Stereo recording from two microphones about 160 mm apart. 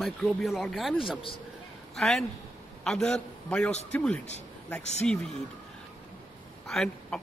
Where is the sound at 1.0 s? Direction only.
35° left (ahead or behind).